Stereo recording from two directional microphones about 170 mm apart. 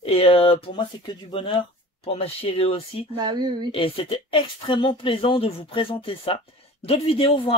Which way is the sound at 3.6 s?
30° left (ahead or behind).